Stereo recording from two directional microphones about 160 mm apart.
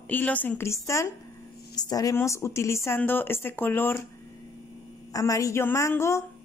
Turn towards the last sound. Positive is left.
turn(degrees=15)  # may be behind; listen again after turning